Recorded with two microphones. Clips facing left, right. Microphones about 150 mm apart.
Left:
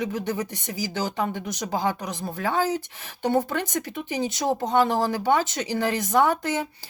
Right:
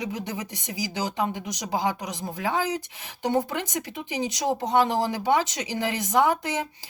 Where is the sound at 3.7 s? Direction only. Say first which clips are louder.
Left 3 dB; 15° right (ahead or behind).